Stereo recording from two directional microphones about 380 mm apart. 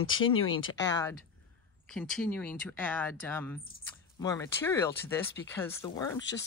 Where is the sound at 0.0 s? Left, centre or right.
Left.